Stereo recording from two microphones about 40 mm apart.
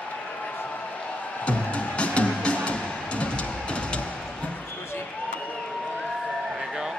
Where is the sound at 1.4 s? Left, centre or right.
Left.